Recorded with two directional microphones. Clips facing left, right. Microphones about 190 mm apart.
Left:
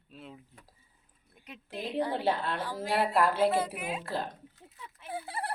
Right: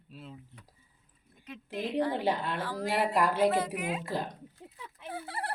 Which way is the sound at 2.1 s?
15° right (ahead or behind).